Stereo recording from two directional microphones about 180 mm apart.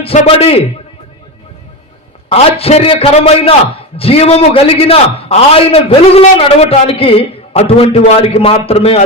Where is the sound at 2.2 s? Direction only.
35° left (ahead or behind).